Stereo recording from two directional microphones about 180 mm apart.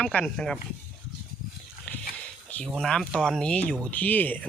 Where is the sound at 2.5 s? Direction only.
Centre (ahead or behind).